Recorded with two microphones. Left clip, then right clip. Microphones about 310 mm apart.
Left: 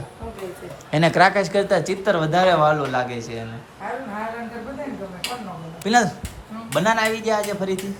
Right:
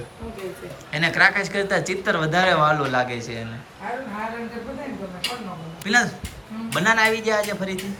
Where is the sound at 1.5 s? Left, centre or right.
Centre.